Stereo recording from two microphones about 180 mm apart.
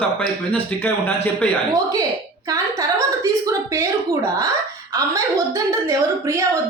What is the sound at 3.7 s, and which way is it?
Speech, 15° right (ahead or behind).